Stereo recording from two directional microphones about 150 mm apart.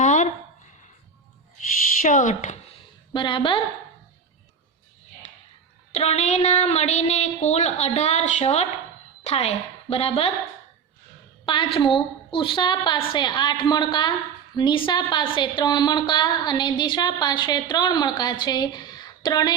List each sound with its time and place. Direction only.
0.0 s a sound: 60° left (ahead or behind)
2.0 s speech: 60° left (ahead or behind)
3.1 s a woman's voice: 30° left (ahead or behind)
5.9 s a woman's voice: 45° left (ahead or behind)
11.4 s a woman's voice: 35° left (ahead or behind)